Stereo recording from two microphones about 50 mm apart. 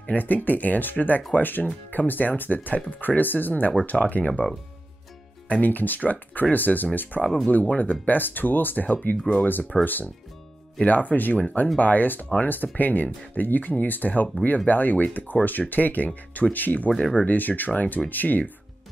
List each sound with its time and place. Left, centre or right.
0.0 s speech: left
5.5 s speech: left